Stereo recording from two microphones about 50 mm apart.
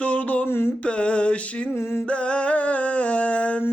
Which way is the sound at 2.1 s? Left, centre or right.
Left.